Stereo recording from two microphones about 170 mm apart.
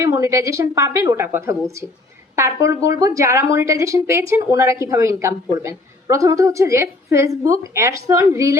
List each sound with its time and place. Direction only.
0.0 s speech: 15° right (ahead or behind)